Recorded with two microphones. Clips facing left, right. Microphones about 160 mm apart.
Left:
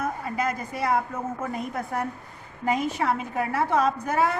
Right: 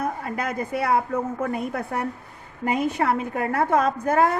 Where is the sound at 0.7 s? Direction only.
60° right (ahead or behind).